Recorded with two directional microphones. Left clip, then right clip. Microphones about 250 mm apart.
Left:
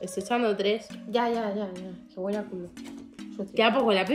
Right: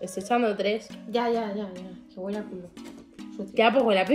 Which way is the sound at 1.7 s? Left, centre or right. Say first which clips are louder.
Left 1 dB; centre.